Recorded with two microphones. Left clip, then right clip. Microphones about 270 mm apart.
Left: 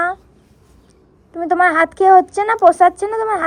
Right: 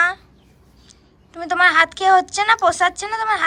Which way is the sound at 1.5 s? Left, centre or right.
Centre.